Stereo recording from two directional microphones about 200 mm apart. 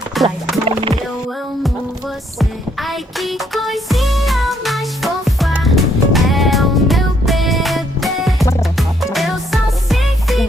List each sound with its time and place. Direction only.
0.1 s music: centre (ahead or behind)
0.6 s music: 25° right (ahead or behind)
2.4 s music: centre (ahead or behind)